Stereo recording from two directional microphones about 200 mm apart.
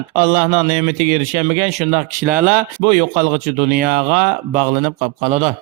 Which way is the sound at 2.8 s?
35° right (ahead or behind).